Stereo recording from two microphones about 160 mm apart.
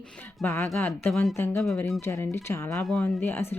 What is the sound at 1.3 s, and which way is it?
Speech, 15° left (ahead or behind).